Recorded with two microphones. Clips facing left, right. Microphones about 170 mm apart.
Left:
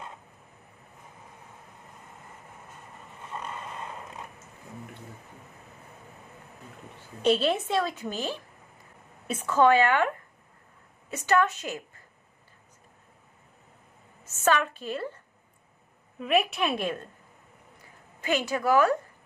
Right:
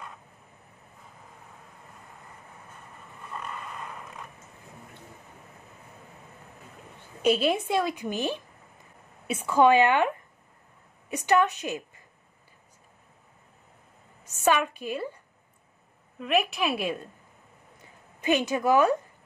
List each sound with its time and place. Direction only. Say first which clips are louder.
3.3 s a sound: left 1 dB; 25° left (ahead or behind)
7.2 s a woman's voice: even; 10° right (ahead or behind)
14.2 s a woman's voice: right 1 dB; 15° right (ahead or behind)
16.2 s a woman's voice: left 1 dB; centre (ahead or behind)
18.2 s a woman's voice: right 2 dB; 20° right (ahead or behind)